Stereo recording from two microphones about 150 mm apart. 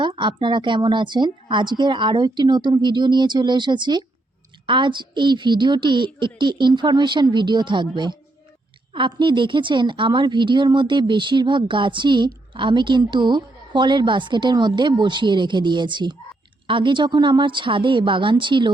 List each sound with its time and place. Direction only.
0.0 s a woman's voice: 30° right (ahead or behind)